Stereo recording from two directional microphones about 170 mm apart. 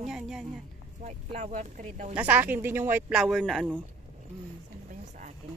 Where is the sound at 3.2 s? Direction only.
Centre (ahead or behind).